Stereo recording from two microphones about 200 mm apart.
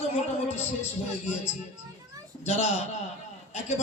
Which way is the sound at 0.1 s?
30° left (ahead or behind).